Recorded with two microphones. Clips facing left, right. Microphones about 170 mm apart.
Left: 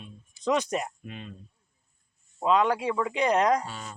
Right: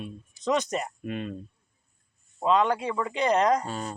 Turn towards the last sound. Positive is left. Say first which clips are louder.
# right 7 dB
turn(degrees=-40)  # may be behind; listen again after turning